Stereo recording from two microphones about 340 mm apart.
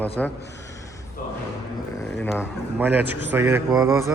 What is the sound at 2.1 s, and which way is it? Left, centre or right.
Speech, centre.